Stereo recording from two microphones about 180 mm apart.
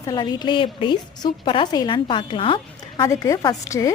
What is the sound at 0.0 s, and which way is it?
A woman's voice, 20° left (ahead or behind).